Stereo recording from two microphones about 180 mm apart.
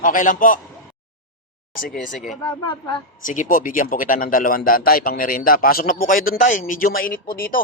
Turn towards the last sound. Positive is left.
turn(degrees=50)  # may be behind; listen again after turning